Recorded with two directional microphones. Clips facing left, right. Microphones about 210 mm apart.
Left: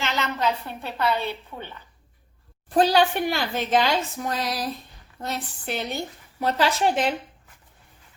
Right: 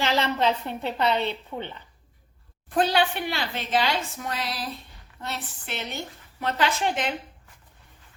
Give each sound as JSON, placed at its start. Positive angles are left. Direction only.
{"t": 0.0, "sound": "a woman's voice", "side_deg": -30}
{"t": 2.6, "sound": "a woman's voice", "side_deg": 35}